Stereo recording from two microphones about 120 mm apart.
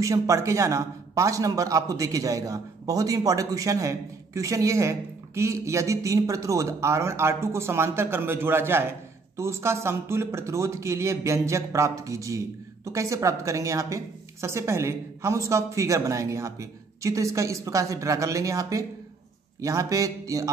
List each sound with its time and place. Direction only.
0.0 s a man's voice: 25° right (ahead or behind)